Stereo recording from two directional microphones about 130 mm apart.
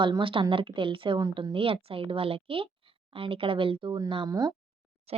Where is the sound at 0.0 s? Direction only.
40° right (ahead or behind).